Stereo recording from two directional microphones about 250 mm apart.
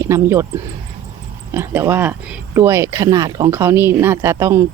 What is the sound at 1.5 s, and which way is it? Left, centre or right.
Speech, centre.